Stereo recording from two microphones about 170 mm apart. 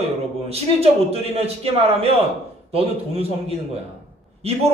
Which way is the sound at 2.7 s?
35° right (ahead or behind).